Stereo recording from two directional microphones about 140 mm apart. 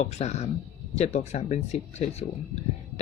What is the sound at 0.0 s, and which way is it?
Speech, 50° left (ahead or behind).